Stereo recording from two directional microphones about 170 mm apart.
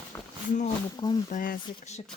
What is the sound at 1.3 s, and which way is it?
Speech, 50° left (ahead or behind).